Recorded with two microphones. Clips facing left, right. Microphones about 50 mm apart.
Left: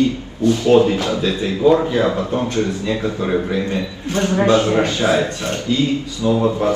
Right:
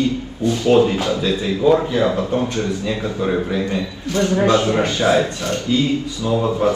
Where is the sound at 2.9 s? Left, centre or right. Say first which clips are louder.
Even; left.